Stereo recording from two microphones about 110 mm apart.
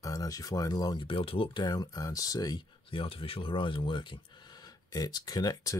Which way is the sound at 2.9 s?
55° left (ahead or behind).